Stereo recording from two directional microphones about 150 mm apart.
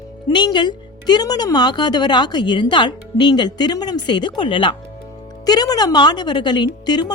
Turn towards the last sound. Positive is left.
turn(degrees=30)  # may be behind; listen again after turning